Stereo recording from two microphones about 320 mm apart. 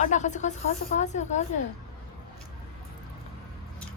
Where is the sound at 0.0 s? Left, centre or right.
Left.